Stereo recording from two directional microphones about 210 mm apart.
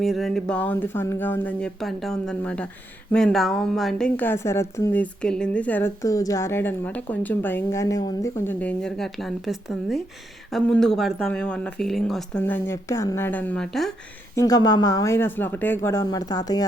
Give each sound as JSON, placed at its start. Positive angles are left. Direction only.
{"t": 0.0, "sound": "a woman's voice", "side_deg": 0}
{"t": 14.3, "sound": "a woman's voice", "side_deg": 20}